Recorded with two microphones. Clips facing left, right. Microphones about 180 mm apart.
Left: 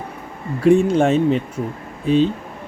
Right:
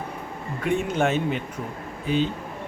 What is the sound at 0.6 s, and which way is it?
Speech, 30° left (ahead or behind).